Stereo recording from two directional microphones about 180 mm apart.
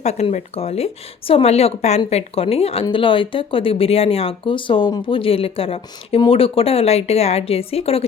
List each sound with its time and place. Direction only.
0.0 s speech: 40° left (ahead or behind)